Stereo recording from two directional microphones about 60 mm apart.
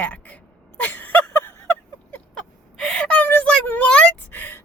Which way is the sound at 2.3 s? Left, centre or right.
Centre.